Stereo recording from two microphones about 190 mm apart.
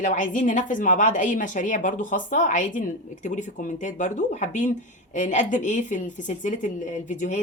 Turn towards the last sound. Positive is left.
turn(degrees=40)  # may be behind; listen again after turning